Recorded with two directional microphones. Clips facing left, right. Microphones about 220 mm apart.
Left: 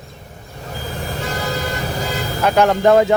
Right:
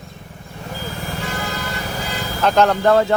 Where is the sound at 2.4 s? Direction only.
10° left (ahead or behind).